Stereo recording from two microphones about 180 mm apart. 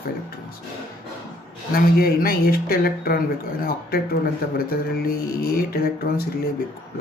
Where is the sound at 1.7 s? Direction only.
55° left (ahead or behind).